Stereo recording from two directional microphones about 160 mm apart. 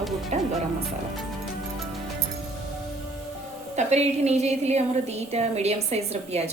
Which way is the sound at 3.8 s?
45° right (ahead or behind).